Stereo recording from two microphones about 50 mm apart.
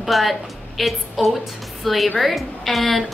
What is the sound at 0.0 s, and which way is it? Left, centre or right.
A woman's voice, centre.